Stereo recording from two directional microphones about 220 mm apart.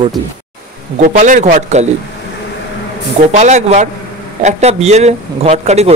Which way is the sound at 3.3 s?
30° right (ahead or behind).